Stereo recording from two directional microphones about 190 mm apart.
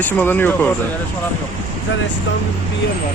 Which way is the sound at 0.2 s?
10° left (ahead or behind).